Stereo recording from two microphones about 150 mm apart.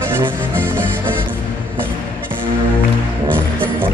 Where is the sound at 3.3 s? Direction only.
15° right (ahead or behind).